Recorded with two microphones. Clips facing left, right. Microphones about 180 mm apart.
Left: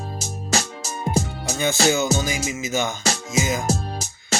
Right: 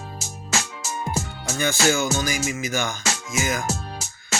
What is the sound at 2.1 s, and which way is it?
Speech, 20° left (ahead or behind).